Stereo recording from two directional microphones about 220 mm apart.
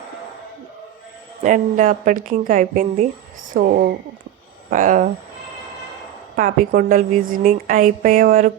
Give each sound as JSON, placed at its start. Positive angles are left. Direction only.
{"t": 1.4, "sound": "a woman's voice", "side_deg": -35}
{"t": 6.3, "sound": "a woman's voice", "side_deg": -40}